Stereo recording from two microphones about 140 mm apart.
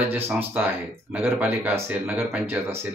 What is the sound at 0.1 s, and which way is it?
Speech, 15° right (ahead or behind).